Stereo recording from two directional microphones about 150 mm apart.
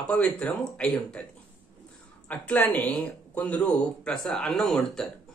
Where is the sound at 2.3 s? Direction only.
10° left (ahead or behind).